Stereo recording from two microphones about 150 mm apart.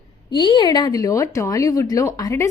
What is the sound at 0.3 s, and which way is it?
Speech, 30° left (ahead or behind).